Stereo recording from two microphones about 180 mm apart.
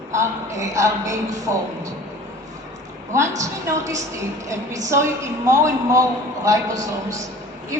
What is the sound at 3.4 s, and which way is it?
A woman's voice, 15° right (ahead or behind).